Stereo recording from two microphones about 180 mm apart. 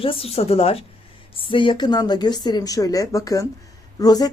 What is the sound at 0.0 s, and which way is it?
A woman's voice, 30° left (ahead or behind).